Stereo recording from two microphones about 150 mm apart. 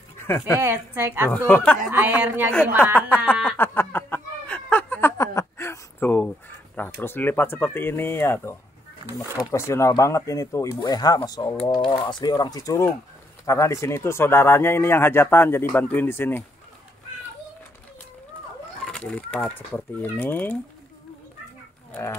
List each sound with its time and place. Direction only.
0.6 s a woman's voice: 15° right (ahead or behind)
1.5 s speech: 10° left (ahead or behind)
1.9 s a woman's voice: 10° right (ahead or behind)
2.8 s speech: 10° left (ahead or behind)
3.4 s a sound: 15° left (ahead or behind)
7.0 s speech: 15° left (ahead or behind)
18.9 s speech: 5° left (ahead or behind)